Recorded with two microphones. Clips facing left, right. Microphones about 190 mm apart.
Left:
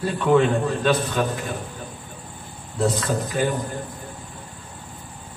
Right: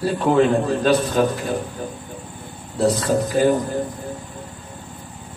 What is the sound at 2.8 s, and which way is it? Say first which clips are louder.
Speech: right 4 dB; 35° right (ahead or behind).